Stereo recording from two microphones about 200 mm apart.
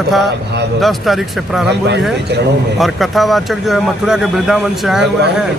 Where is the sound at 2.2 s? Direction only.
55° right (ahead or behind).